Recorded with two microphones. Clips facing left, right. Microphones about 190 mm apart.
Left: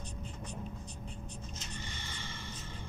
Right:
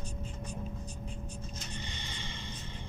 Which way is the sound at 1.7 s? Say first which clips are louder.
Right 2 dB; 20° right (ahead or behind).